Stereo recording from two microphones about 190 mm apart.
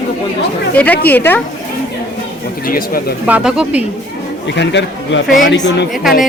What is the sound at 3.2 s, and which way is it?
Speech, 5° right (ahead or behind).